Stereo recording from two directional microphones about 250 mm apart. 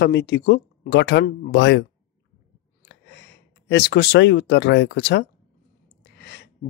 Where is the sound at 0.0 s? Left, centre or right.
Left.